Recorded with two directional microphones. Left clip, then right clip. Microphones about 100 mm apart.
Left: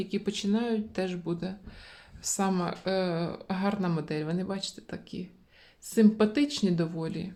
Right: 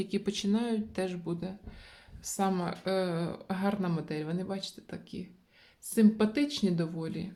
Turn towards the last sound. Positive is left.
turn(degrees=25)  # may be behind; listen again after turning